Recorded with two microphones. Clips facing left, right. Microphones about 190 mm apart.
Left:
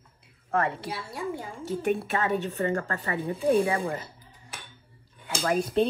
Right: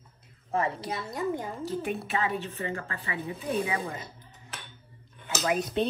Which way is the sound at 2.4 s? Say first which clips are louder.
Left 7 dB; 40° left (ahead or behind).